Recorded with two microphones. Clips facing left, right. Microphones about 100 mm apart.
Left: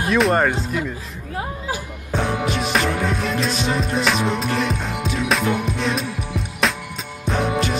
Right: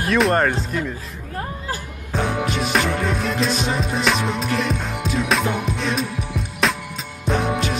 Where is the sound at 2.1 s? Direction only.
Centre (ahead or behind).